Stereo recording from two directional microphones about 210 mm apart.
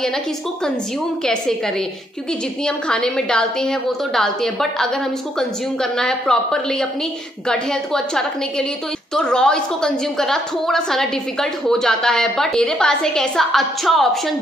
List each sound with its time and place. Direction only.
2.6 s a woman's voice: 5° left (ahead or behind)